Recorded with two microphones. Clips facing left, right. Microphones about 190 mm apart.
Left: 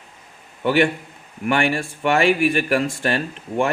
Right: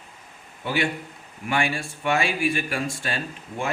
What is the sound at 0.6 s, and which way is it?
A man's voice, 65° left (ahead or behind).